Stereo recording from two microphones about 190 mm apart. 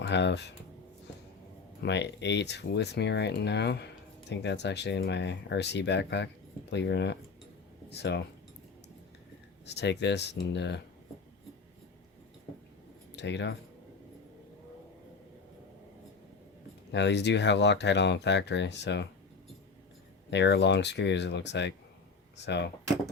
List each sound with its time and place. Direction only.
0.0 s speech: 65° left (ahead or behind)
1.8 s speech: 65° left (ahead or behind)
9.6 s speech: 65° left (ahead or behind)
13.1 s speech: 70° left (ahead or behind)
16.9 s speech: 65° left (ahead or behind)
20.3 s speech: 65° left (ahead or behind)